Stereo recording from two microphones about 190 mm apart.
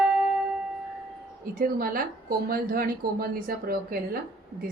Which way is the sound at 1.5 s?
50° right (ahead or behind).